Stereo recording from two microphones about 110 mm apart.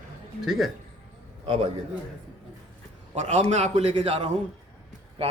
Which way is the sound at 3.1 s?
75° right (ahead or behind).